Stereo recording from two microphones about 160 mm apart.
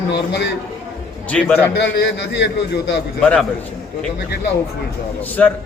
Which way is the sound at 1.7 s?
90° left.